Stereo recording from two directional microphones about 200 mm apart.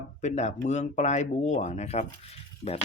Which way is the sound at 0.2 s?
35° left (ahead or behind).